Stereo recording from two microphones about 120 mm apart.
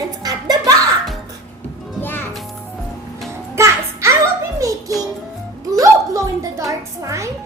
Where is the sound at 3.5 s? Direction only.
25° right (ahead or behind).